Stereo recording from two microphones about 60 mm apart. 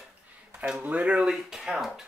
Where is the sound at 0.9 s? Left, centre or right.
Right.